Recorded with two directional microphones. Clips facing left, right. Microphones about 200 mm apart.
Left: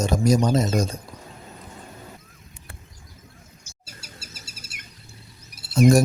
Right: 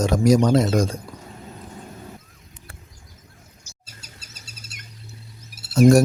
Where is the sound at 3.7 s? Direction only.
55° left (ahead or behind).